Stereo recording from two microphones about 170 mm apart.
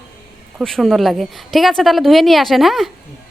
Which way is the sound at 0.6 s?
Centre (ahead or behind).